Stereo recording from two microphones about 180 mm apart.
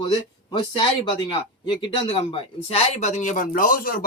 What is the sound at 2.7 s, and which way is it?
Speech, 40° left (ahead or behind).